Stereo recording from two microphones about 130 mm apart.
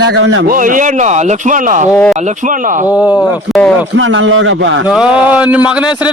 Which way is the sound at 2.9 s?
10° right (ahead or behind).